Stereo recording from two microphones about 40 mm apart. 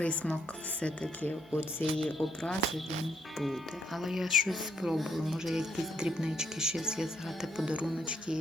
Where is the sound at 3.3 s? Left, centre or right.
Centre.